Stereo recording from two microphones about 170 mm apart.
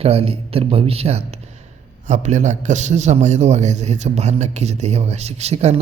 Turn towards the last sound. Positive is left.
turn(degrees=-40)  # may be behind; listen again after turning